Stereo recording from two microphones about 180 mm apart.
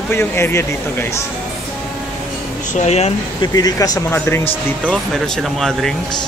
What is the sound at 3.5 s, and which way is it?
Speech, 20° left (ahead or behind).